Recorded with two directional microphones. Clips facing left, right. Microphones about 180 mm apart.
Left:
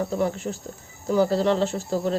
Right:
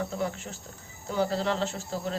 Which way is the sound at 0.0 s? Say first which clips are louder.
Left 7 dB; 40° left (ahead or behind).